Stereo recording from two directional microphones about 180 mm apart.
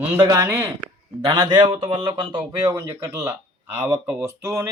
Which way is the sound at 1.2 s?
25° right (ahead or behind).